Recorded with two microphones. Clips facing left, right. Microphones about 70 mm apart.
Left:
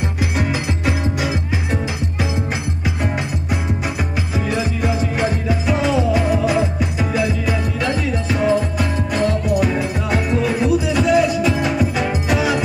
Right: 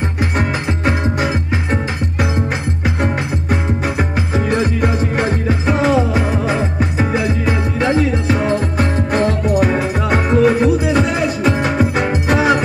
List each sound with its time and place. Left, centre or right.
0.4 s music: right
4.5 s music: right